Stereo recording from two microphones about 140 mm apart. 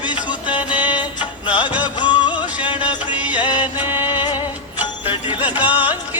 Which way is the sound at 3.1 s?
10° right (ahead or behind).